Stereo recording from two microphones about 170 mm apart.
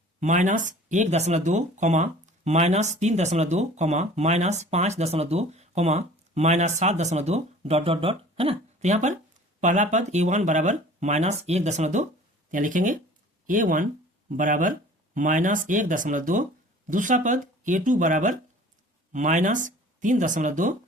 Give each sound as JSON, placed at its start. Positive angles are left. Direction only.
{"t": 0.2, "sound": "speech", "side_deg": -45}